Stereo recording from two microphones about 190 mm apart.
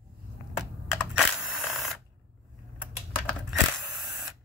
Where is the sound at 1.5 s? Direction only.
Centre (ahead or behind).